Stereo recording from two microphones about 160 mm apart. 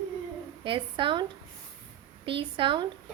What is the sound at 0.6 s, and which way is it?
Speech, 30° right (ahead or behind).